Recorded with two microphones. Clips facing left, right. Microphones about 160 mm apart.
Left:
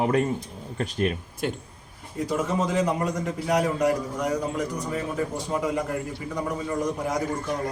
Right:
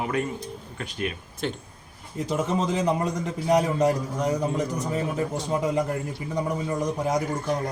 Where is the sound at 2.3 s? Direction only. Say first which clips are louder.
Even; 20° right (ahead or behind).